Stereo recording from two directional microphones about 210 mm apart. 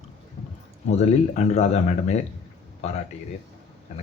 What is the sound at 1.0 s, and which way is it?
Speech, 30° left (ahead or behind).